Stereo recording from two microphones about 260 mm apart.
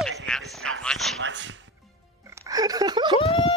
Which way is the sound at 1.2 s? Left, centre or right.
Right.